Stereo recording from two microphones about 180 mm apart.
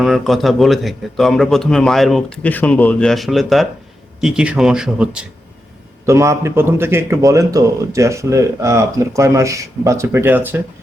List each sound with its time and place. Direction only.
0.0 s a man's voice: centre (ahead or behind)
6.1 s a man's voice: 15° right (ahead or behind)